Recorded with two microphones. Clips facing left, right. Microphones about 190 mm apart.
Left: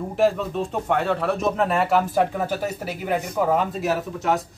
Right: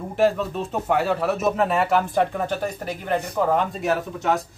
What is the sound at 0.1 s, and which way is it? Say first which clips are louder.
Speech: right 1 dB; centre (ahead or behind).